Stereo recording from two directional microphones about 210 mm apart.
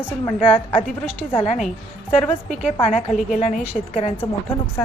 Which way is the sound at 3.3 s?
35° left (ahead or behind).